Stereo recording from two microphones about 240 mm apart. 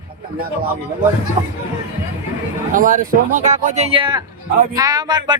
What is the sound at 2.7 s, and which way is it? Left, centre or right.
Speech, right.